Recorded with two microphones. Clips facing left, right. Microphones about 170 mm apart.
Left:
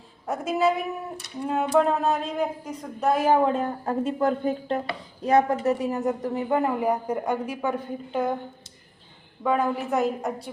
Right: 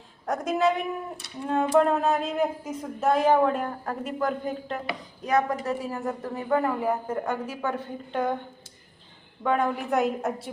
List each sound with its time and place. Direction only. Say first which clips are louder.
0.3 s speech: left 1 dB; 5° left (ahead or behind)
3.4 s a woman's voice: left 1 dB; 25° left (ahead or behind); by 8.4 s 5° left (ahead or behind)
9.4 s speech: left 1 dB; 5° left (ahead or behind)